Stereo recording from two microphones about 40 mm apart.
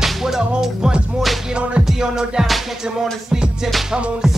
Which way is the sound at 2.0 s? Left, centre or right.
Centre.